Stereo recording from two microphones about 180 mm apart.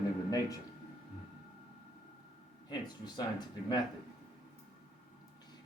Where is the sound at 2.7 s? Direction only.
20° left (ahead or behind).